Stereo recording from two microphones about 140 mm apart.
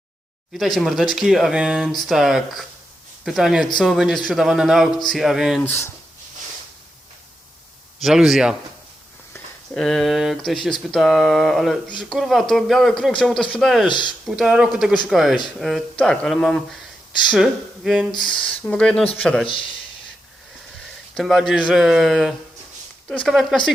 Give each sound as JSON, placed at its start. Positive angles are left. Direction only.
{"t": 0.5, "sound": "speech", "side_deg": 0}
{"t": 5.6, "sound": "speech", "side_deg": 15}
{"t": 8.0, "sound": "speech", "side_deg": 0}
{"t": 9.7, "sound": "speech", "side_deg": 5}
{"t": 21.2, "sound": "speech", "side_deg": 0}